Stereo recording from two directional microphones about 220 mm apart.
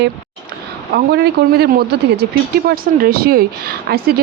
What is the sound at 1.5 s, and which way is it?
Speech, 45° right (ahead or behind).